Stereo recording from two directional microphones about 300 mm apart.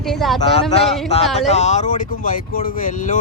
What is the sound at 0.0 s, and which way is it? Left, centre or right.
Speech, centre.